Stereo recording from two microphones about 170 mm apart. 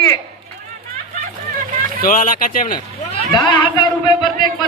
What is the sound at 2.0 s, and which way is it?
Speech, 55° left (ahead or behind).